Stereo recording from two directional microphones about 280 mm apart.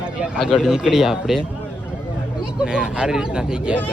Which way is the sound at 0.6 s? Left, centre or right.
Centre.